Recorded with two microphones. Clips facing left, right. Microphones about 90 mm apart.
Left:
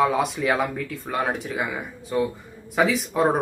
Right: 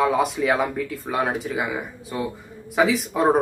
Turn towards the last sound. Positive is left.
turn(degrees=0)  # may be behind; listen again after turning